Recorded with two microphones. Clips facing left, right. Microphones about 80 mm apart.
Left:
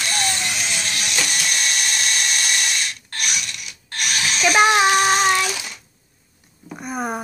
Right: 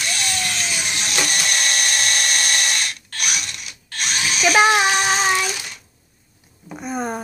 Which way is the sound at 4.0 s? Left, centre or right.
Right.